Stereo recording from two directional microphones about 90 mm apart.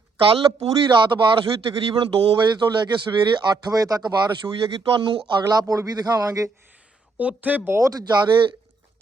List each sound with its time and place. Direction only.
0.2 s a man's voice: 75° right (ahead or behind); by 4.4 s 50° right (ahead or behind)
4.4 s speech: 65° right (ahead or behind)
5.4 s a man's voice: 45° right (ahead or behind)
7.2 s speech: 15° right (ahead or behind)
7.7 s a man's voice: 40° right (ahead or behind)